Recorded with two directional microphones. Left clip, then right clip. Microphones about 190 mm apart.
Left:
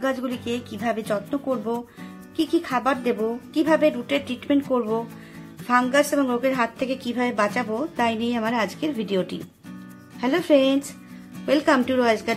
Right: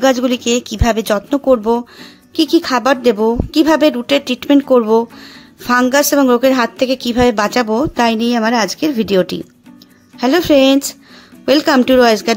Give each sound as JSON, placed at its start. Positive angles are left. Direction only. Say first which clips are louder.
{"t": 0.0, "sound": "a woman's voice", "louder": "right 13 dB", "side_deg": -55}